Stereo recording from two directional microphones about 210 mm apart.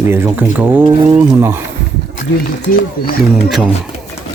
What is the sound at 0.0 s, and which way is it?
Speech, 10° right (ahead or behind).